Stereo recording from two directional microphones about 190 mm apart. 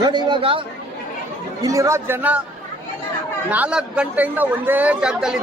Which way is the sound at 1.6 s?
20° right (ahead or behind).